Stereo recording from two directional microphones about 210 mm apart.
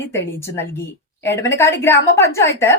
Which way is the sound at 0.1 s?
10° left (ahead or behind).